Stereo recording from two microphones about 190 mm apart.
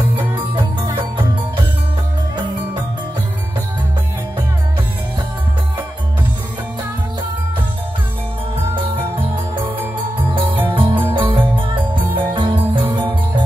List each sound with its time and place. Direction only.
10.7 s music: 25° right (ahead or behind)